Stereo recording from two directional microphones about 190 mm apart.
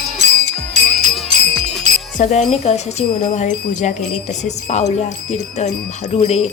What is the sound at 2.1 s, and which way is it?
Speech, 40° left (ahead or behind).